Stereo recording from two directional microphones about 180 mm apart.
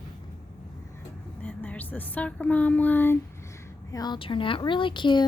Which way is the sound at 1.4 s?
10° left (ahead or behind).